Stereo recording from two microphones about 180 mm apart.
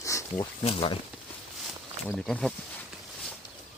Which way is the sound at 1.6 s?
Centre (ahead or behind).